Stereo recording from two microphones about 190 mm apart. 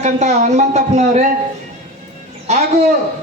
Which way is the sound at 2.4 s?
35° right (ahead or behind).